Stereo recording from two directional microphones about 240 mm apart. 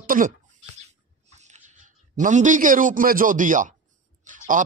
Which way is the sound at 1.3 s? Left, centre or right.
Right.